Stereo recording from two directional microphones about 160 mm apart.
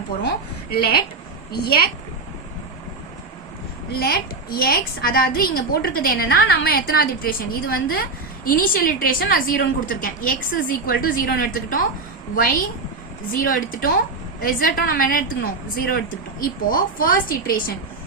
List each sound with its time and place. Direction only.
0.2 s a woman's voice: 85° left
4.0 s a woman's voice: 70° left (ahead or behind)
16.4 s a woman's voice: 65° left (ahead or behind)